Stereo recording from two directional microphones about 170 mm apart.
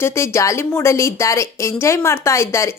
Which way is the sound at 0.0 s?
15° left (ahead or behind).